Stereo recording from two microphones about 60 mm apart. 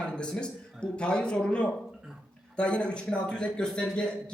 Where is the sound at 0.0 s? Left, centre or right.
Centre.